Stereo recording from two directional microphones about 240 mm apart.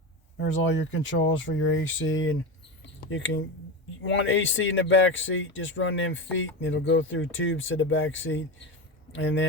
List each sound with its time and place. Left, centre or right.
0.3 s speech: left
2.8 s a sound: left
4.1 s speech: left